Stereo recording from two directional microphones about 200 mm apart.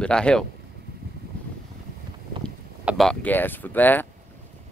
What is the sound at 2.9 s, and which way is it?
Speech, centre (ahead or behind).